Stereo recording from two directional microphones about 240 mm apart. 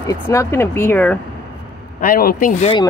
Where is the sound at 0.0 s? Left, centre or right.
Centre.